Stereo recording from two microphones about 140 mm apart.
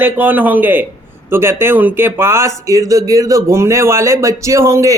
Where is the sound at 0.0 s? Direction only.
10° right (ahead or behind).